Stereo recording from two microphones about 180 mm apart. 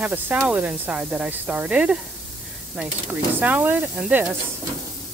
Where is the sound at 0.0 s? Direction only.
10° right (ahead or behind).